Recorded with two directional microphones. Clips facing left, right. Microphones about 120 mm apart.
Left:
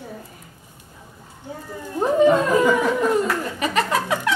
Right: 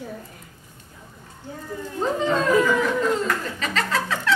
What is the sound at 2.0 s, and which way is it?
Speech, 15° left (ahead or behind).